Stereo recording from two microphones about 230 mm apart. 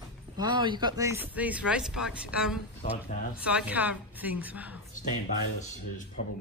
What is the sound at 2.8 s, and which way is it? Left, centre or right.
Speech, left.